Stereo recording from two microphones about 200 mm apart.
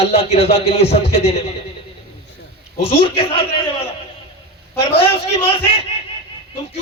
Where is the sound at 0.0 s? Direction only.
30° left (ahead or behind).